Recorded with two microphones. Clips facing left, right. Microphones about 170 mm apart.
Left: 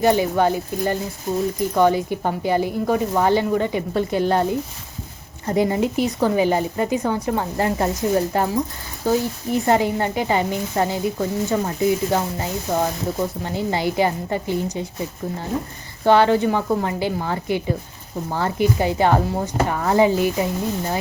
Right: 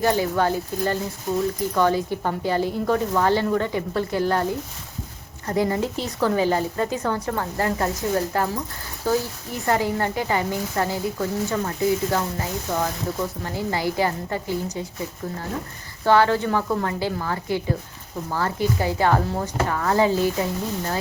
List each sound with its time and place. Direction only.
0.0 s speech: 20° left (ahead or behind)